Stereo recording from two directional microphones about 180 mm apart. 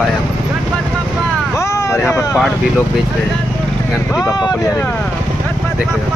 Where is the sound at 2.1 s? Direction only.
15° left (ahead or behind).